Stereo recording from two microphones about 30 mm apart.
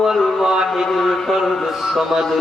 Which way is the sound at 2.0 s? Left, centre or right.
Centre.